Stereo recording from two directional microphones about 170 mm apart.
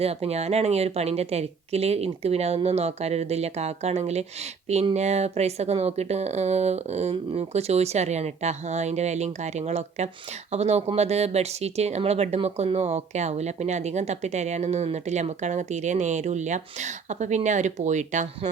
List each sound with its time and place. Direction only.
0.0 s speech: 35° right (ahead or behind)